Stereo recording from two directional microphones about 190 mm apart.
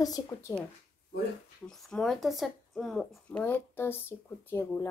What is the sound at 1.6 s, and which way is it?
Speech, centre (ahead or behind).